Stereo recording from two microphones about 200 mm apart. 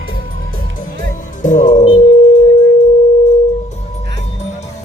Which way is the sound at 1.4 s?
40° left (ahead or behind).